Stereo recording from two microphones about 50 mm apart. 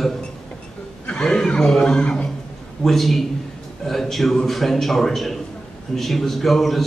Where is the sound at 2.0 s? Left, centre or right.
Left.